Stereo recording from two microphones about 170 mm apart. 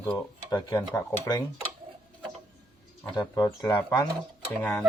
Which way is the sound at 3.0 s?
20° left (ahead or behind).